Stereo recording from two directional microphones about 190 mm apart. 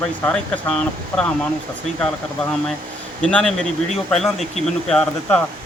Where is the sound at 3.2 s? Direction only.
5° left (ahead or behind).